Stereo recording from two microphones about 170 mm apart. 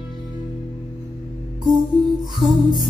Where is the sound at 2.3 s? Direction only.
25° left (ahead or behind).